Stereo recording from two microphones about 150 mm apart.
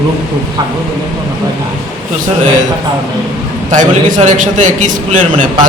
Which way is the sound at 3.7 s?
55° right (ahead or behind).